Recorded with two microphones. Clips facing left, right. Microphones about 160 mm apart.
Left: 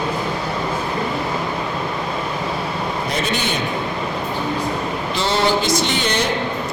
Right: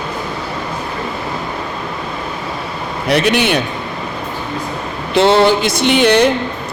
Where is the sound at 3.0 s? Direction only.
70° right (ahead or behind).